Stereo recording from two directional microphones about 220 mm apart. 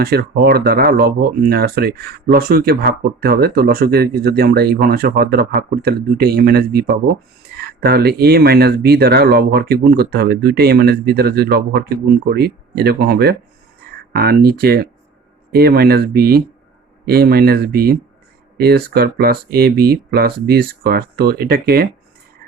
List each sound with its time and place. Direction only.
0.0 s speech: 45° right (ahead or behind)